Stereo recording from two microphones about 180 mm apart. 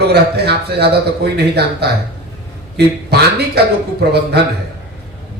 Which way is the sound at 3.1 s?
65° right (ahead or behind).